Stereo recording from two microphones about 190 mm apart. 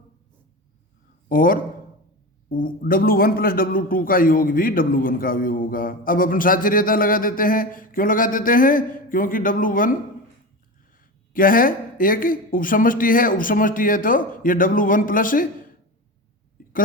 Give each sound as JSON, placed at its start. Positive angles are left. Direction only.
{"t": 1.3, "sound": "a man's voice", "side_deg": 45}
{"t": 11.3, "sound": "a man's voice", "side_deg": 45}